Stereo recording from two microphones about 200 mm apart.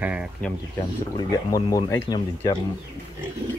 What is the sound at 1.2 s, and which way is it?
Speech, 20° left (ahead or behind).